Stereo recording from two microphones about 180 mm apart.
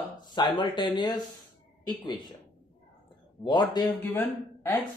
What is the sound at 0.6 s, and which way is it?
Speech, 25° left (ahead or behind).